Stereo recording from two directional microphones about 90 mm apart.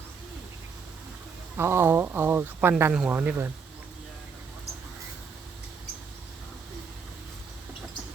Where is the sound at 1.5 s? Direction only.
30° right (ahead or behind).